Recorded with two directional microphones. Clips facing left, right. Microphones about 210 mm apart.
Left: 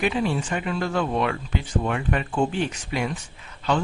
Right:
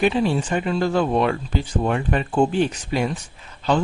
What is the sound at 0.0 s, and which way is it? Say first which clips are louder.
A man's voice: right 4 dB; 30° right (ahead or behind).